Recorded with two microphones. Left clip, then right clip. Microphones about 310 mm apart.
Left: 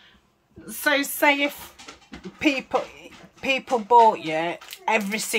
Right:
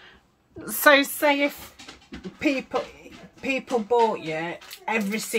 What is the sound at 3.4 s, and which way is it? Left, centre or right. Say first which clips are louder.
Speech: left 2 dB; centre.